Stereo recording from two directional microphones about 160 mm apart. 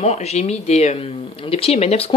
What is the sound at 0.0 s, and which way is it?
Speech, 40° left (ahead or behind).